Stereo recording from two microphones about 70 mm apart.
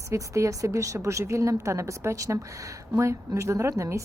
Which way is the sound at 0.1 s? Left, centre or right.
Right.